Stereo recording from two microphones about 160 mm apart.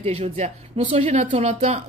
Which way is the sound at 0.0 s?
40° right (ahead or behind).